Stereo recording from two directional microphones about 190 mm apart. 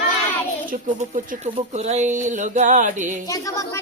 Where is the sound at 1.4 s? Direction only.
35° right (ahead or behind).